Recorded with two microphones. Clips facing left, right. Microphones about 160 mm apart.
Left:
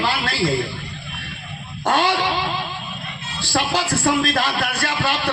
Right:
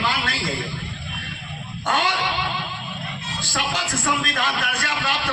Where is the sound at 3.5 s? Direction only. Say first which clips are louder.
Left 6 dB; 35° left (ahead or behind).